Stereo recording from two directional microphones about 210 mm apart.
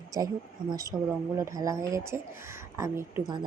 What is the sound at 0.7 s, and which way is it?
A woman's voice, 15° right (ahead or behind).